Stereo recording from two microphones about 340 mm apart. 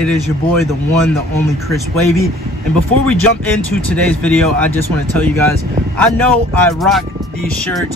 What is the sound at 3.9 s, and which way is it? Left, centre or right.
Speech, centre.